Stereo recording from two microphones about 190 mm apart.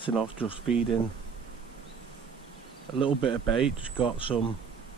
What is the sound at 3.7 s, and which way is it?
Speech, 25° left (ahead or behind).